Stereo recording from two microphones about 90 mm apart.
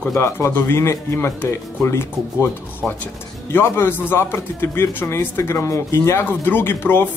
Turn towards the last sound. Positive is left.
turn(degrees=25)  # may be behind; listen again after turning